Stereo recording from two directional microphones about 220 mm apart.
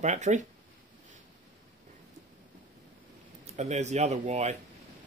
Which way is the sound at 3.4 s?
30° right (ahead or behind).